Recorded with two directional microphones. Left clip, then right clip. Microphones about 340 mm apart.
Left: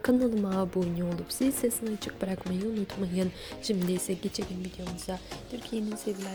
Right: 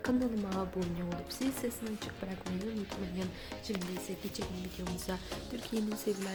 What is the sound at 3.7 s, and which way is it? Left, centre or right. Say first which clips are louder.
Speech: left 8 dB; left.